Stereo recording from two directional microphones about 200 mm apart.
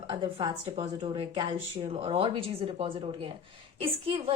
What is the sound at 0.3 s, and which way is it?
A woman's voice, 25° right (ahead or behind).